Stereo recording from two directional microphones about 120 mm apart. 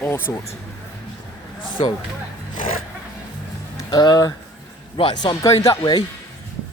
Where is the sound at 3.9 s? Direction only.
35° left (ahead or behind).